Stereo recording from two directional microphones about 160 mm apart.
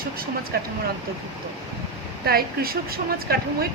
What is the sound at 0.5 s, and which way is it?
Speech, 75° right (ahead or behind).